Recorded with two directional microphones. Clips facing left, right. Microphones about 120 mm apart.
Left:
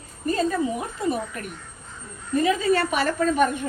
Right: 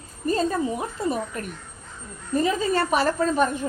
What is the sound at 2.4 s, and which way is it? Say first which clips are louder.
A woman's voice: left 2 dB; 35° right (ahead or behind).